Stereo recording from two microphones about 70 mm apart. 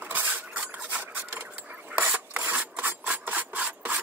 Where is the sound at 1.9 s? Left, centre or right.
Right.